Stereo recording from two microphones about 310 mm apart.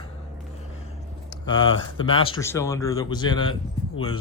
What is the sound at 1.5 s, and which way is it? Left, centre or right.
Speech, left.